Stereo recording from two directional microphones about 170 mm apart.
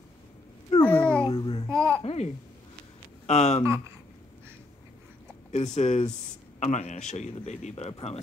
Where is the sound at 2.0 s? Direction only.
40° left (ahead or behind).